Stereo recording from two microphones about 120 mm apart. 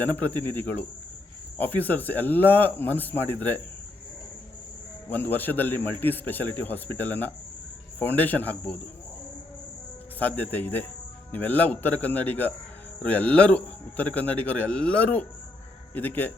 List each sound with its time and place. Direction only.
0.0 s a man's voice: 15° left (ahead or behind)
5.0 s a man's voice: 15° left (ahead or behind)
10.2 s a man's voice: 15° left (ahead or behind)